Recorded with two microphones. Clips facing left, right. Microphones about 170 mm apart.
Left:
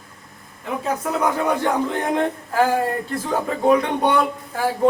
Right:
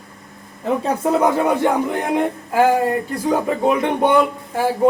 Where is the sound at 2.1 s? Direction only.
15° right (ahead or behind).